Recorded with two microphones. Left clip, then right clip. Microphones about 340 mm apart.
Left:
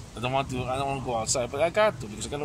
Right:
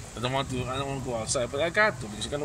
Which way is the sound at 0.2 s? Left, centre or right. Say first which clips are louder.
Left 2 dB; centre.